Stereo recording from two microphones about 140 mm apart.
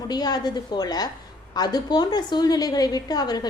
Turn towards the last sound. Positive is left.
turn(degrees=30)  # may be behind; listen again after turning